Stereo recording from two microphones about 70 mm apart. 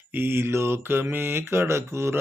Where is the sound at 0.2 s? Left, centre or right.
Right.